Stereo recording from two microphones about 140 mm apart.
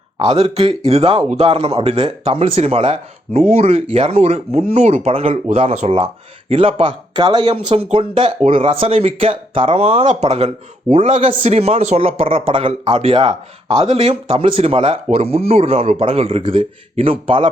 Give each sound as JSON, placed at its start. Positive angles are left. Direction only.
{"t": 0.2, "sound": "a man's voice", "side_deg": -45}
{"t": 7.9, "sound": "a man's voice", "side_deg": -40}